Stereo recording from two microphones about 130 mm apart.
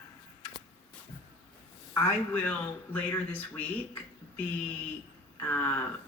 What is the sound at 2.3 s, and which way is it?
Speech, 15° left (ahead or behind).